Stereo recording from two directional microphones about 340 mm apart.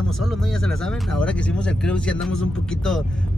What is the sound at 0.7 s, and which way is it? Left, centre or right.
Speech, centre.